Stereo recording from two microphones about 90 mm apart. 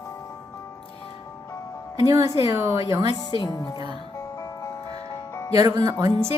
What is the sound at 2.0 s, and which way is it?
A woman's voice, 40° right (ahead or behind).